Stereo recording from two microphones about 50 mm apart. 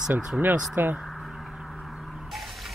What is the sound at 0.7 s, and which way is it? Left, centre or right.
Speech, right.